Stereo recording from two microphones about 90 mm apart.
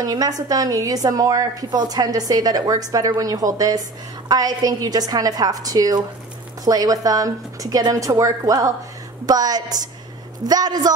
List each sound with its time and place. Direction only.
0.0 s a woman's voice: 45° right (ahead or behind)